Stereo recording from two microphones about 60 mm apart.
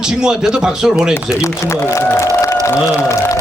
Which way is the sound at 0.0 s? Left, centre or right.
Centre.